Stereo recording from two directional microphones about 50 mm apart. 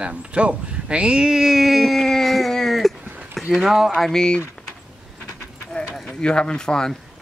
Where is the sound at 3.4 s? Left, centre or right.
Centre.